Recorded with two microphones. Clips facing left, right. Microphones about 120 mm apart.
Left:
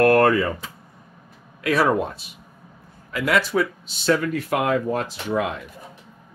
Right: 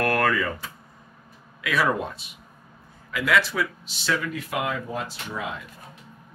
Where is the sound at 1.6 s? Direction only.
35° left (ahead or behind).